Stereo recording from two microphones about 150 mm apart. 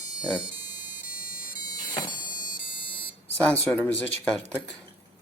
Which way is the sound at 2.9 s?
35° left (ahead or behind).